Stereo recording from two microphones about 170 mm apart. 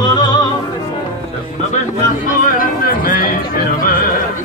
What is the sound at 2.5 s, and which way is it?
Music, 55° left (ahead or behind).